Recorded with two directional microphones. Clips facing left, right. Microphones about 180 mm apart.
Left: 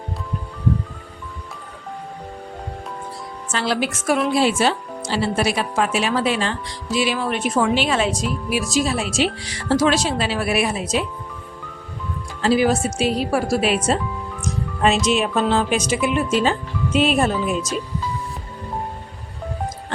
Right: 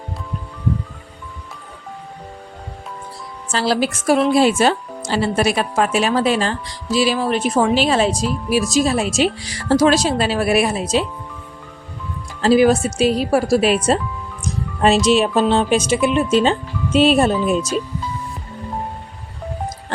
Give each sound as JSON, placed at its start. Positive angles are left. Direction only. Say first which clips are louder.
{"t": 3.5, "sound": "speech", "louder": "right 4 dB", "side_deg": -35}
{"t": 12.4, "sound": "speech", "louder": "right 4 dB", "side_deg": -40}
{"t": 14.4, "sound": "music", "louder": "right 3 dB", "side_deg": -35}
{"t": 15.0, "sound": "speech", "louder": "right 4 dB", "side_deg": -30}